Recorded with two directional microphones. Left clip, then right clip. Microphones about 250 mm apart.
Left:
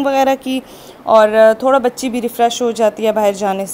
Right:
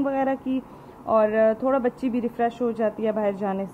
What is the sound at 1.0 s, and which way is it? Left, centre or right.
A woman's voice, centre.